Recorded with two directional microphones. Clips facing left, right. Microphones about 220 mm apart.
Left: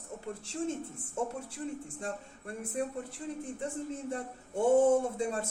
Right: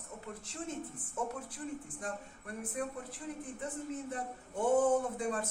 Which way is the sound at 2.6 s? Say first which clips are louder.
Left 4 dB; 25° left (ahead or behind).